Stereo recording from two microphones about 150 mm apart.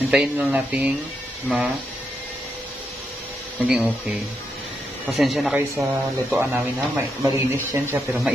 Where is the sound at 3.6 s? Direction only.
10° right (ahead or behind).